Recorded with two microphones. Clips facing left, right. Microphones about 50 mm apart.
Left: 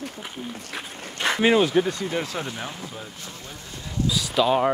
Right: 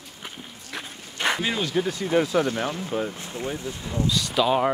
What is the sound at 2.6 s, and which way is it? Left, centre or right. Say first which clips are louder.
Speech: right 8 dB; right.